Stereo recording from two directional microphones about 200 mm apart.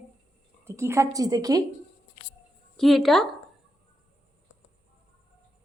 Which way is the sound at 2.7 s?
Centre (ahead or behind).